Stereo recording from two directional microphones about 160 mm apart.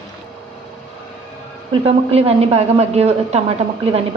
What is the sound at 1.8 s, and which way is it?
Speech, 40° right (ahead or behind).